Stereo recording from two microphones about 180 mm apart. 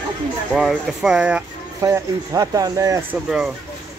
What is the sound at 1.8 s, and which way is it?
Speech, 15° right (ahead or behind).